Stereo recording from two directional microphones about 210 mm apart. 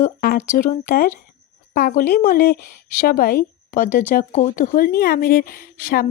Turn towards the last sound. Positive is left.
turn(degrees=45)  # may be behind; listen again after turning